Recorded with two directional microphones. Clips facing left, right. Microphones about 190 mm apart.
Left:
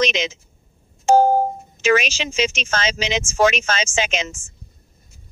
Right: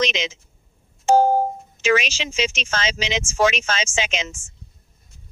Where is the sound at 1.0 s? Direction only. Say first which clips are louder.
Left 2 dB; 45° left (ahead or behind).